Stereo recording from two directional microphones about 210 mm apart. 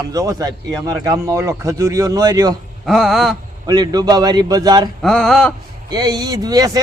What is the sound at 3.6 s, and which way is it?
A man's voice, 20° right (ahead or behind).